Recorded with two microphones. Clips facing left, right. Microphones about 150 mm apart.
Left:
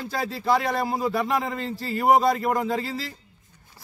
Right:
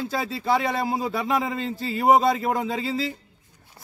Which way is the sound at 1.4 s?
Centre (ahead or behind).